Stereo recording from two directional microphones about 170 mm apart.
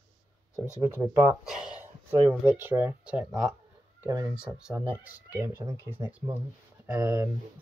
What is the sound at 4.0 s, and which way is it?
Speech, 20° right (ahead or behind).